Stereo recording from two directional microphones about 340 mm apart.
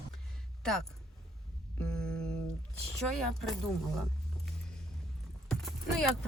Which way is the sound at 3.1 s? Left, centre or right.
Centre.